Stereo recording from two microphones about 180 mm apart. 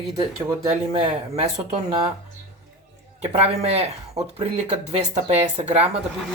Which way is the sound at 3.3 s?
35° right (ahead or behind).